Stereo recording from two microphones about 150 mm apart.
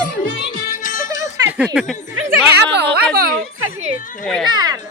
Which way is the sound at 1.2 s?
10° right (ahead or behind).